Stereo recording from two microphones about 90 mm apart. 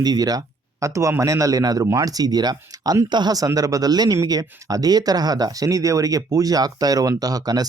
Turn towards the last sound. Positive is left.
turn(degrees=-45)  # may be behind; listen again after turning